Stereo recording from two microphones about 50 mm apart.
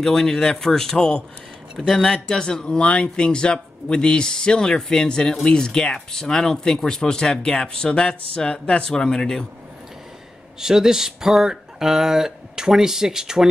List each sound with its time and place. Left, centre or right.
0.0 s speech: centre
10.6 s speech: centre